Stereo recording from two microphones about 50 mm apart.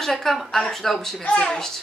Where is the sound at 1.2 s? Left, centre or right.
Centre.